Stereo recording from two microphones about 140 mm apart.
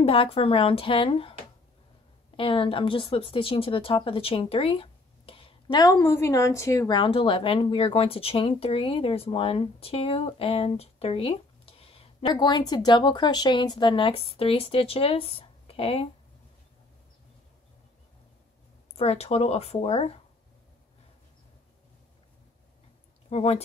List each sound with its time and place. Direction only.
0.0 s speech: 40° left (ahead or behind)
2.3 s a woman's voice: 40° left (ahead or behind)
5.8 s a woman's voice: 20° left (ahead or behind)
6.9 s speech: 40° left (ahead or behind)
12.4 s speech: 30° left (ahead or behind)
18.9 s speech: 45° left (ahead or behind)
23.3 s speech: 50° left (ahead or behind)